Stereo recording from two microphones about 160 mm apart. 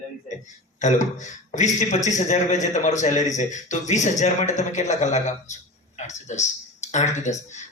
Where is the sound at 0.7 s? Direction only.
50° left (ahead or behind).